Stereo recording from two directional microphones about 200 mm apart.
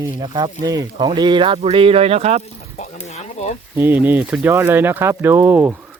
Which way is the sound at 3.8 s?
10° right (ahead or behind).